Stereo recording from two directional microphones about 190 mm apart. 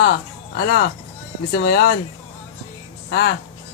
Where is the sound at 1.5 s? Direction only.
60° left (ahead or behind).